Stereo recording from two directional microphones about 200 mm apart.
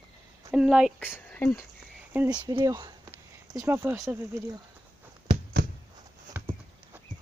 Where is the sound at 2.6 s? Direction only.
20° right (ahead or behind).